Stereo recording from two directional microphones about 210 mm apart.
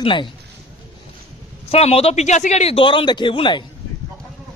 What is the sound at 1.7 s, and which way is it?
Speech, 30° left (ahead or behind).